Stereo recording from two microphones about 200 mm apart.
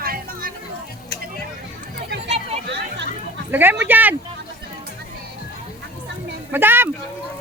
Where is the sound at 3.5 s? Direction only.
10° right (ahead or behind).